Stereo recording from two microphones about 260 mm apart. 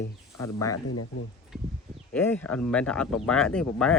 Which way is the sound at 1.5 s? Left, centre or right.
Centre.